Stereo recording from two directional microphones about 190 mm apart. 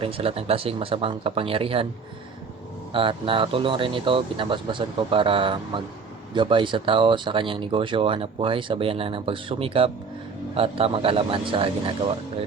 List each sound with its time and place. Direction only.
0.0 s speech: 30° right (ahead or behind)
2.9 s speech: 25° right (ahead or behind)